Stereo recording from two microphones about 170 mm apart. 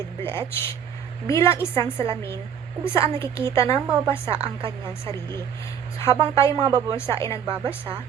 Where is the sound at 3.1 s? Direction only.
15° left (ahead or behind).